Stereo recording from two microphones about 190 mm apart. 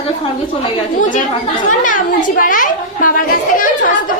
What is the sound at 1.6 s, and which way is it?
A woman's voice, 45° left (ahead or behind).